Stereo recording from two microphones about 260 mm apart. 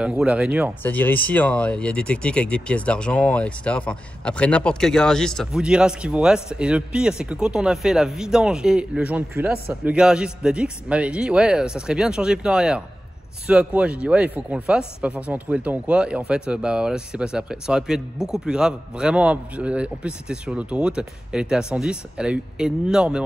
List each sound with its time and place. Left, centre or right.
0.0 s speech: centre
0.8 s speech: centre